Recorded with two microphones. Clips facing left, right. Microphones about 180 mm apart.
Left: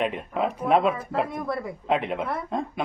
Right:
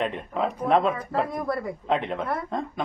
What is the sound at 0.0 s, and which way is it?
Speech, 10° left (ahead or behind).